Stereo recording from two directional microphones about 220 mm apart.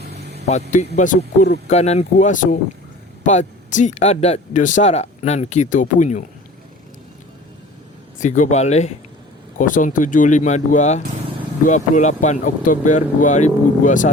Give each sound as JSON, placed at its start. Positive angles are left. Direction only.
{"t": 0.0, "sound": "vehicle", "side_deg": -50}
{"t": 0.9, "sound": "speech", "side_deg": 35}
{"t": 8.2, "sound": "speech", "side_deg": 35}